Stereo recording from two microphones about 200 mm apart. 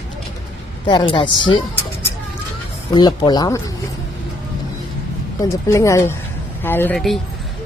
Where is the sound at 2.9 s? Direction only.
20° left (ahead or behind).